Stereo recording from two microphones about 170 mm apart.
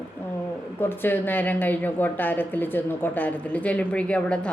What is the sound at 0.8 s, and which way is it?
A woman's voice, 10° left (ahead or behind).